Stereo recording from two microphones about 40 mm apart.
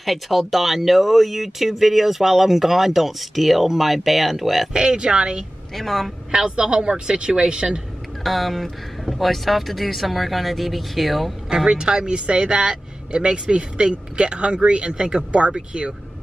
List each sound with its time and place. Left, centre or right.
0.0 s speech: centre
4.7 s speech: centre
5.8 s speech: centre
6.3 s speech: right
8.2 s speech: centre
11.4 s speech: centre